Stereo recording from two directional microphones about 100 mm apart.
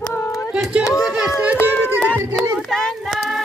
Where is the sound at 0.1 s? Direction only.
30° left (ahead or behind).